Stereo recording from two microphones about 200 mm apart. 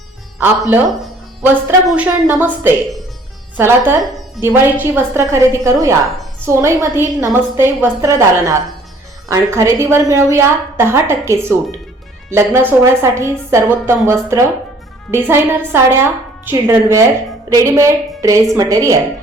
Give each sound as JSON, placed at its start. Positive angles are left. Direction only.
{"t": 1.4, "sound": "a woman's voice", "side_deg": -5}